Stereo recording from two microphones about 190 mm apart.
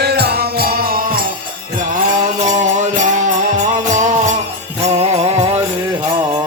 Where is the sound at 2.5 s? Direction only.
40° right (ahead or behind).